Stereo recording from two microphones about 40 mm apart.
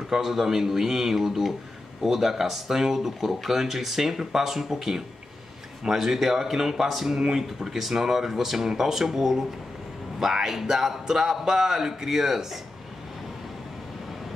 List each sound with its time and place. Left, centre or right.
0.1 s speech: centre